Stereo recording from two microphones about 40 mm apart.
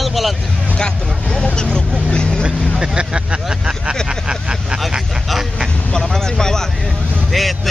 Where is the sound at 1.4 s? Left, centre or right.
Centre.